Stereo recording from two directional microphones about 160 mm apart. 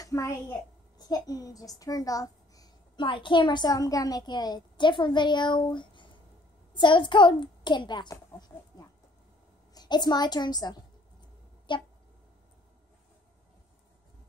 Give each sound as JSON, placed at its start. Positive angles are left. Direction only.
{"t": 0.0, "sound": "a woman's voice", "side_deg": 20}